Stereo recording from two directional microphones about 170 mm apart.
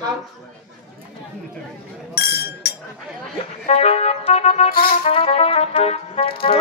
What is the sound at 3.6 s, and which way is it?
Speech, 40° left (ahead or behind).